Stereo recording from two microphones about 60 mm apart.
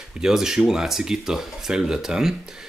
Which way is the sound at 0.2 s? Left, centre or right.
Centre.